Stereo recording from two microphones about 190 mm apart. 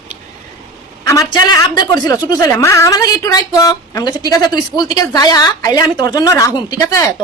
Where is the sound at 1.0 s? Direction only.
15° left (ahead or behind).